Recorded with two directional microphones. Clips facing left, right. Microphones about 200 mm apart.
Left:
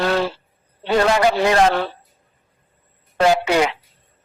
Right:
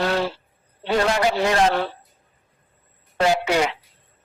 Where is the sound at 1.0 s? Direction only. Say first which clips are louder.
Left 4 dB; 80° left.